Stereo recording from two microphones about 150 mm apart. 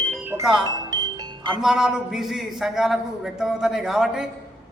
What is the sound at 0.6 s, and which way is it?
Music, 25° right (ahead or behind).